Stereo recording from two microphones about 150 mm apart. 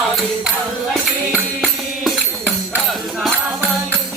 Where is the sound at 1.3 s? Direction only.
5° right (ahead or behind).